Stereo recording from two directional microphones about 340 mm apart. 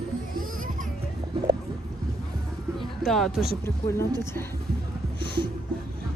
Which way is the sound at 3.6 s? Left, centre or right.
Centre.